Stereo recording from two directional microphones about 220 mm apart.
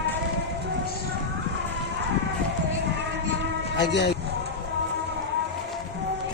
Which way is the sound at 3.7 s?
50° left (ahead or behind).